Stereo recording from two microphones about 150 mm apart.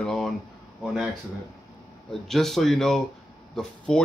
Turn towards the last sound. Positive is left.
turn(degrees=5)  # may be behind; listen again after turning